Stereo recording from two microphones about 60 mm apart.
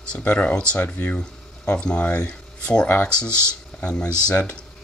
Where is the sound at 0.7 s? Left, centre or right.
Left.